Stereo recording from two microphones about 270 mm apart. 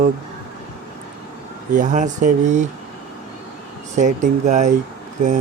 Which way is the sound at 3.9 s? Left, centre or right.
Right.